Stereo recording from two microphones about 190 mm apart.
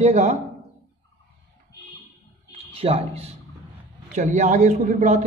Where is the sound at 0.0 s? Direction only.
35° right (ahead or behind).